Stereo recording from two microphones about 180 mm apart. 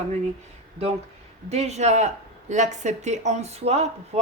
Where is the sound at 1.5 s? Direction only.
35° right (ahead or behind).